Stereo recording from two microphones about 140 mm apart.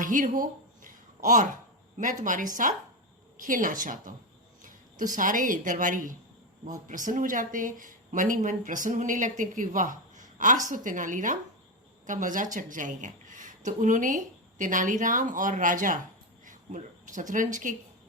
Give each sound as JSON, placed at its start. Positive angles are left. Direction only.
{"t": 0.0, "sound": "a sound", "side_deg": -70}
{"t": 2.0, "sound": "a woman's voice", "side_deg": -65}
{"t": 5.1, "sound": "a woman's voice", "side_deg": -70}